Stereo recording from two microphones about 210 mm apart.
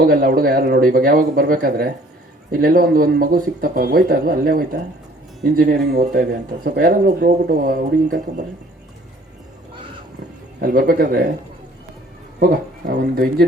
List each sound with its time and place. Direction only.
0.0 s speech: 45° right (ahead or behind)
10.6 s speech: 45° right (ahead or behind)
12.4 s speech: 45° right (ahead or behind)